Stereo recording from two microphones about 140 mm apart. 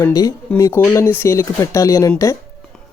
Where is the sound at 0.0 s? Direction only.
25° left (ahead or behind).